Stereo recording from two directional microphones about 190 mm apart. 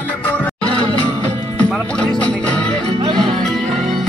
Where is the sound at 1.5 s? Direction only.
5° left (ahead or behind).